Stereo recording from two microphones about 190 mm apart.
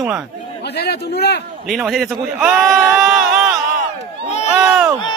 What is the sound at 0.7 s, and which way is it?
Speech, 60° left (ahead or behind).